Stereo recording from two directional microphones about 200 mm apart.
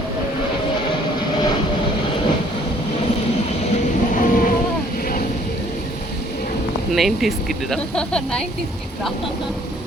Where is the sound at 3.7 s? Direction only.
40° left (ahead or behind).